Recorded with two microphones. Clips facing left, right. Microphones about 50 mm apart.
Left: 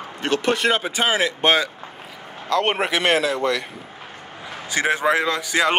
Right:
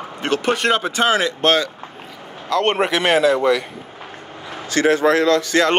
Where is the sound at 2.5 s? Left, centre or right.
Centre.